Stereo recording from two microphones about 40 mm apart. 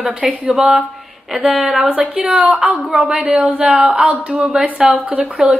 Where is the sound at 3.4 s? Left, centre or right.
Right.